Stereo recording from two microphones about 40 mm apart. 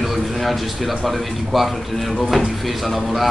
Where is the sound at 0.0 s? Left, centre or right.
Centre.